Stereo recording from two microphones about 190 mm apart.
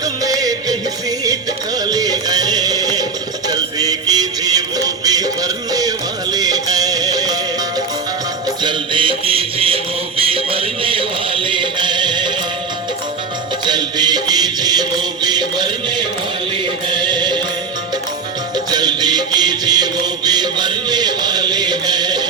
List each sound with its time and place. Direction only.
0.0 s music: 20° right (ahead or behind)
1.8 s music: 20° right (ahead or behind)
3.5 s a sound: 20° right (ahead or behind)
5.0 s music: 20° right (ahead or behind)
8.6 s music: 25° right (ahead or behind)
13.7 s music: 20° right (ahead or behind)
18.5 s music: 20° right (ahead or behind)